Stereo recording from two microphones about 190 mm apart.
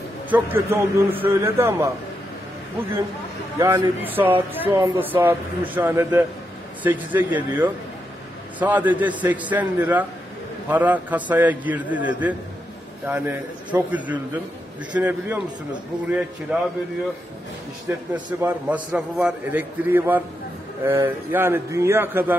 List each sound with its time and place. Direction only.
0.3 s a man's voice: 10° right (ahead or behind)
3.5 s a man's voice: 15° right (ahead or behind)
16.5 s a man's voice: 10° right (ahead or behind)
17.8 s a man's voice: 10° right (ahead or behind)